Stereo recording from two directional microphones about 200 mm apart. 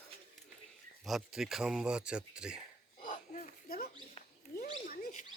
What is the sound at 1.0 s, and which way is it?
Speech, centre (ahead or behind).